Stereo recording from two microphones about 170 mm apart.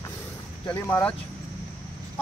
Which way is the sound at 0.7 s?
15° left (ahead or behind).